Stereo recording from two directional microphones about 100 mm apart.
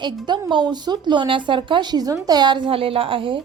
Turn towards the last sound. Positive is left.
turn(degrees=-60)  # may be behind; listen again after turning